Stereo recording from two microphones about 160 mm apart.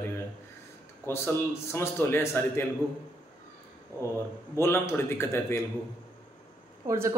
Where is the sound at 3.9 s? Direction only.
15° left (ahead or behind).